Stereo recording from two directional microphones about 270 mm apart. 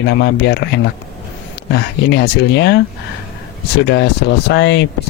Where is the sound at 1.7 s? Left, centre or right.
Left.